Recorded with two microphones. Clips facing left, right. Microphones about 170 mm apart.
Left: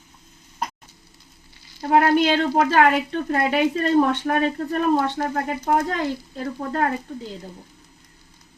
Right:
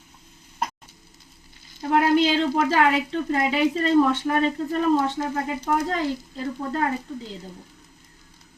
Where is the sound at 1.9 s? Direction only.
60° left (ahead or behind).